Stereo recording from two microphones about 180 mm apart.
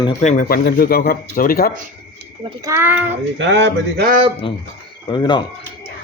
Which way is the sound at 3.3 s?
80° right.